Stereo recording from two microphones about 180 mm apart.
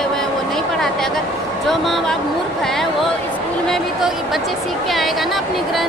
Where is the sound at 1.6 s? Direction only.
Centre (ahead or behind).